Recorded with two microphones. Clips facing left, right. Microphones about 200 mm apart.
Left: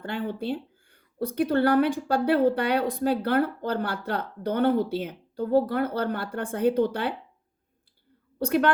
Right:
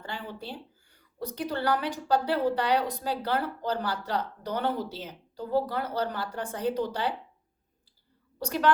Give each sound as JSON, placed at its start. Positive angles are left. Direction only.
{"t": 0.0, "sound": "a woman's voice", "side_deg": 55}
{"t": 8.4, "sound": "a woman's voice", "side_deg": 55}